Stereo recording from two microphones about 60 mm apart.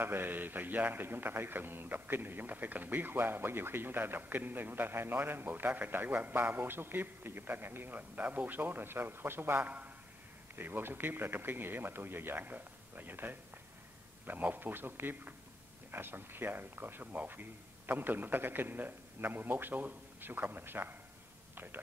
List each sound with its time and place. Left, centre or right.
0.0 s a man's voice: right
9.6 s a man's voice: right
10.5 s a man's voice: right